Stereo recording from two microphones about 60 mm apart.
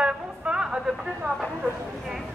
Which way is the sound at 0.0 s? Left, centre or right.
Centre.